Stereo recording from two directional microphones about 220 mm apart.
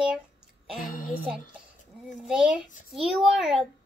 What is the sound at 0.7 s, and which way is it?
Speech, 40° left (ahead or behind).